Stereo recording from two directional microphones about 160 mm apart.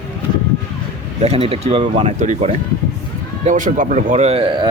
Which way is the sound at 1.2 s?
40° right (ahead or behind).